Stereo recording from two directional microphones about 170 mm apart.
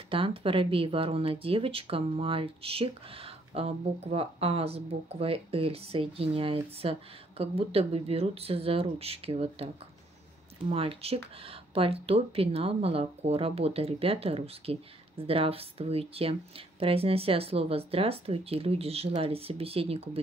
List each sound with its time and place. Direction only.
0.1 s speech: 30° right (ahead or behind)
10.7 s speech: 35° right (ahead or behind)